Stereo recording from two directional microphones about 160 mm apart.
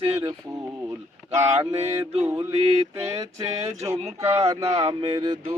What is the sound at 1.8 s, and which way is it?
Speech, 40° right (ahead or behind).